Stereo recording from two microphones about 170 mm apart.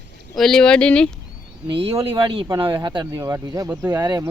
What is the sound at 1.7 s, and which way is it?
Speech, 35° right (ahead or behind).